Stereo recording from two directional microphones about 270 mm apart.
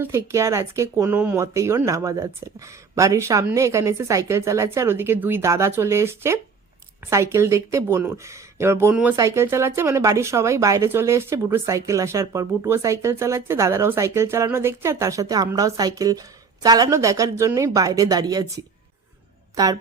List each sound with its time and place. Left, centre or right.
0.0 s speech: centre